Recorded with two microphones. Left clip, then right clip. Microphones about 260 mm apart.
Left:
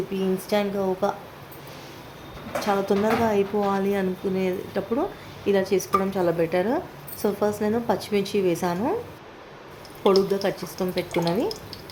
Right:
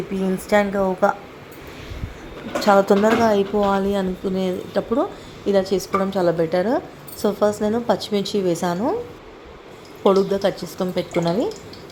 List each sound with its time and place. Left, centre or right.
0.5 s speech: centre
2.6 s speech: centre
10.0 s speech: centre